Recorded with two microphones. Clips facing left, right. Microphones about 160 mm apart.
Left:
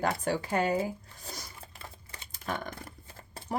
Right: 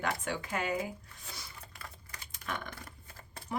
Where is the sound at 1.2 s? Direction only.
40° left (ahead or behind).